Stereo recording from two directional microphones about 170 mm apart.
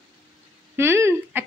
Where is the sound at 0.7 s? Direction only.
15° right (ahead or behind).